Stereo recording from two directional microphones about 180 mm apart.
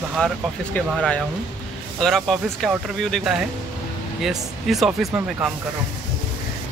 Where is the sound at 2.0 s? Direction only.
Centre (ahead or behind).